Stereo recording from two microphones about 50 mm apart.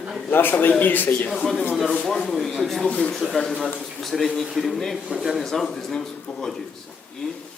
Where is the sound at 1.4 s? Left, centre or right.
Centre.